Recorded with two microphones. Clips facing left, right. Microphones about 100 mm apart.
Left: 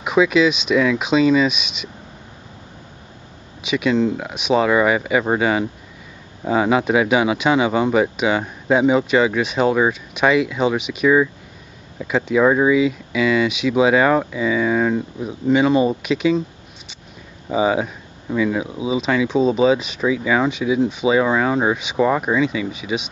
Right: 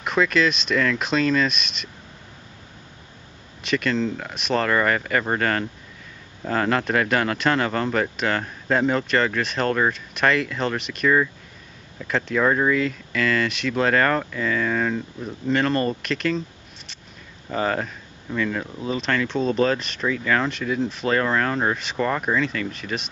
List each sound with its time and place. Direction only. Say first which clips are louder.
0.0 s speech: left 5 dB; 5° left (ahead or behind)
3.6 s speech: left 5 dB; 5° left (ahead or behind)